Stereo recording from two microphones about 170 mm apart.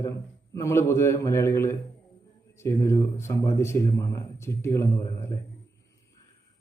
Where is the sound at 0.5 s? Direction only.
15° left (ahead or behind).